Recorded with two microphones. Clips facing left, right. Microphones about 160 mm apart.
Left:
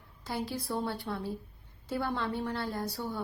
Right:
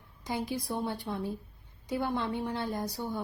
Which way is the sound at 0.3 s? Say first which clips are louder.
Right 1 dB; 15° right (ahead or behind).